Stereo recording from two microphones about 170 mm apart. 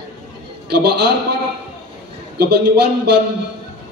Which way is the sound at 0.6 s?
75° right (ahead or behind).